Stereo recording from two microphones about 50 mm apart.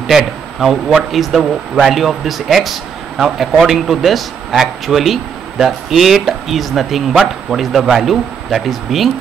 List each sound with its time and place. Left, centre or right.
0.6 s speech: centre